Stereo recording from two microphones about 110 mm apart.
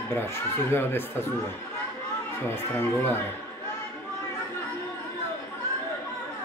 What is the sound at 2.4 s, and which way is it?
Speech, 20° left (ahead or behind).